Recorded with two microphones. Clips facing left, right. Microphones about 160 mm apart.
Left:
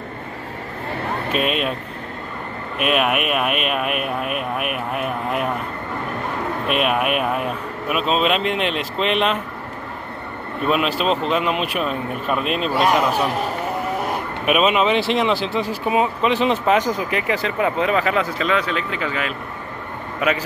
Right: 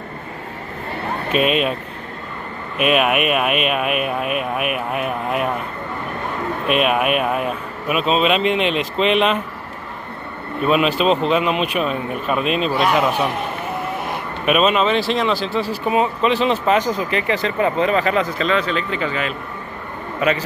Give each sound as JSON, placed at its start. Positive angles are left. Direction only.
{"t": 1.3, "sound": "speech", "side_deg": 0}
{"t": 2.8, "sound": "speech", "side_deg": 0}
{"t": 6.7, "sound": "speech", "side_deg": 0}
{"t": 10.7, "sound": "speech", "side_deg": 0}
{"t": 14.4, "sound": "speech", "side_deg": 5}
{"t": 15.0, "sound": "speech", "side_deg": 20}